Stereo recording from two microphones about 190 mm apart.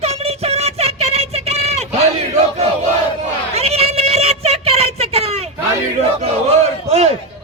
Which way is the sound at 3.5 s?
35° right (ahead or behind).